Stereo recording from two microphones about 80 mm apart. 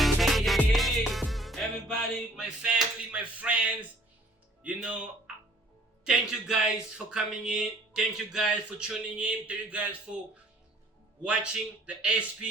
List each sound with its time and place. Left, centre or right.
0.0 s music: centre
4.6 s speech: centre
11.2 s speech: centre